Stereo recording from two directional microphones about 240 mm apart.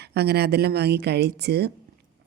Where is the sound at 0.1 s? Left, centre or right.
Right.